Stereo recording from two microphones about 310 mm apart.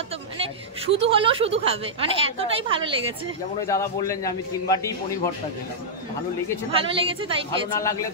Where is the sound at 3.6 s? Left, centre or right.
Centre.